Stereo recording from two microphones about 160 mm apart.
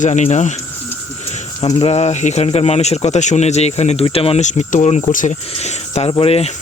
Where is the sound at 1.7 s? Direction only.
40° left (ahead or behind).